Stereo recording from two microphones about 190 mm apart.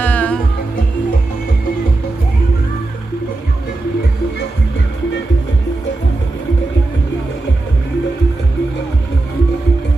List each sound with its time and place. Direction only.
0.0 s music: 10° left (ahead or behind)